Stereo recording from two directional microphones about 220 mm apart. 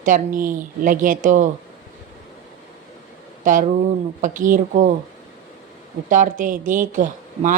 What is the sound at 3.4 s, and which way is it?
A woman's voice, 35° right (ahead or behind).